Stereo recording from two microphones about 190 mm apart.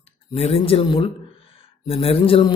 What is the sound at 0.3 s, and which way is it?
A man's voice, 30° left (ahead or behind).